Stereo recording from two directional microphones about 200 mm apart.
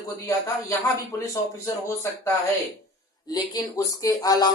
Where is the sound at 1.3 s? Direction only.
15° left (ahead or behind).